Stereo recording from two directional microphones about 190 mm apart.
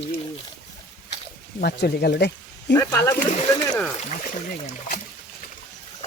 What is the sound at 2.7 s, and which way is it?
Speech, 15° left (ahead or behind).